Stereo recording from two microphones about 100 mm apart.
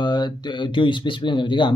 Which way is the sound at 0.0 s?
45° left (ahead or behind).